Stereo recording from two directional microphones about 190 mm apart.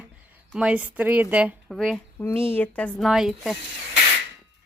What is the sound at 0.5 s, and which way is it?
Speech, 5° right (ahead or behind).